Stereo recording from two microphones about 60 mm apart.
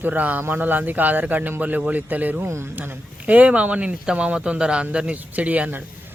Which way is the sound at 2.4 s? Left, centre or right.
Right.